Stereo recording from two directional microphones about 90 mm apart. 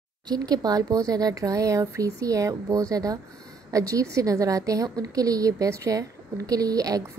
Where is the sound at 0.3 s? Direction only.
45° right (ahead or behind).